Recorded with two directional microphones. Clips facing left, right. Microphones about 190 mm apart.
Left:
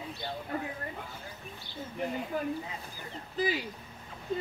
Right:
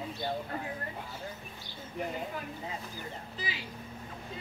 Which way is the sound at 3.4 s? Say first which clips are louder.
Left 13 dB; 50° left (ahead or behind).